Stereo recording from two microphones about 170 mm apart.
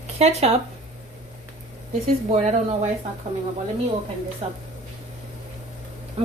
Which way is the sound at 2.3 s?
40° right (ahead or behind).